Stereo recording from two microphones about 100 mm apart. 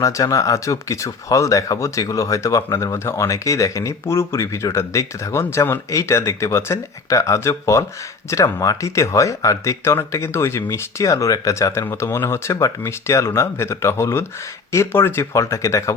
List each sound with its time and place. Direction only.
0.0 s speech: 35° left (ahead or behind)